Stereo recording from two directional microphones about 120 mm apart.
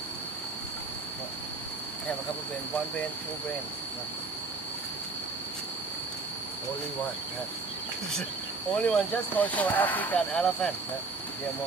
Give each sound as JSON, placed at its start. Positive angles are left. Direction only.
{"t": 8.7, "sound": "speech", "side_deg": 10}
{"t": 10.3, "sound": "speech", "side_deg": 5}